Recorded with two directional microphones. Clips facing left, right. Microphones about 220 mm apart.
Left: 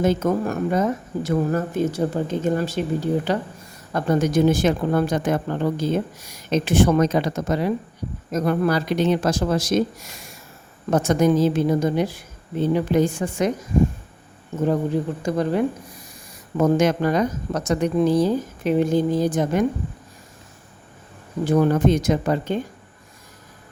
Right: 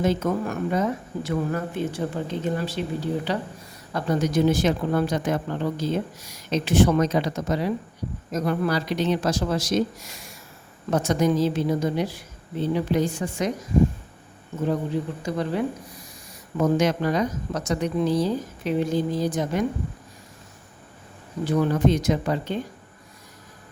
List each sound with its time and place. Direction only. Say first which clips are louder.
0.0 s speech: left 3 dB; 45° left (ahead or behind)
10.9 s speech: left 4 dB; 50° left (ahead or behind)
15.2 s speech: left 5 dB; 50° left (ahead or behind)
21.4 s speech: left 3 dB; 50° left (ahead or behind)